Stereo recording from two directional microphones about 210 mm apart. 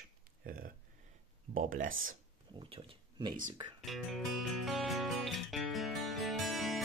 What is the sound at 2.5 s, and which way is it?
Speech, 25° right (ahead or behind).